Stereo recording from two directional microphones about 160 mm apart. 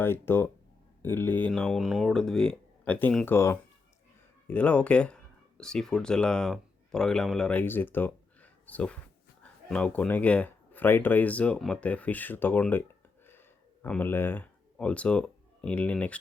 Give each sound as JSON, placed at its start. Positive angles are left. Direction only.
{"t": 0.0, "sound": "speech", "side_deg": 15}
{"t": 13.8, "sound": "speech", "side_deg": 10}